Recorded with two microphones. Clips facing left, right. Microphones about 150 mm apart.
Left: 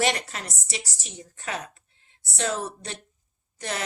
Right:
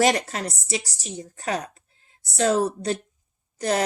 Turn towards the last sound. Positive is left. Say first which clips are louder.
# right 9 dB
turn(degrees=-40)  # may be behind; listen again after turning